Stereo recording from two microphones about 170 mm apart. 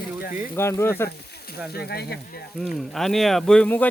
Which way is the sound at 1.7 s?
70° left (ahead or behind).